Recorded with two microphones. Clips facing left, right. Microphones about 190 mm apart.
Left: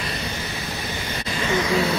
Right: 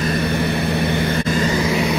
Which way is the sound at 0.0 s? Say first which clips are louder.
Right 11 dB; 60° right (ahead or behind).